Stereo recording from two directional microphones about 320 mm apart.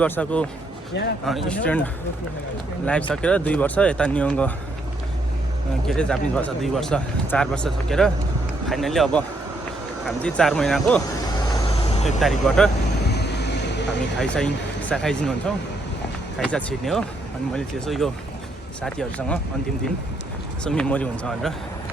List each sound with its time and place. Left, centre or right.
0.0 s speech: centre
3.1 s speech: centre
5.9 s speech: centre
12.0 s speech: centre
13.1 s vehicle: left
14.2 s speech: centre
20.7 s speech: centre